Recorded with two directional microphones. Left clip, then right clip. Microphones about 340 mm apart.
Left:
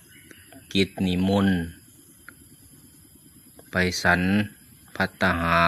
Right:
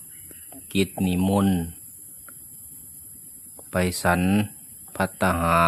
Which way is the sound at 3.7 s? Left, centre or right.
Centre.